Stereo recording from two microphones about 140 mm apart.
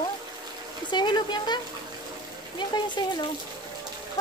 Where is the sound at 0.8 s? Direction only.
35° left (ahead or behind).